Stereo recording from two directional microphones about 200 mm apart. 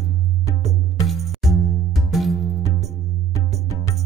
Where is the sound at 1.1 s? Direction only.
Centre (ahead or behind).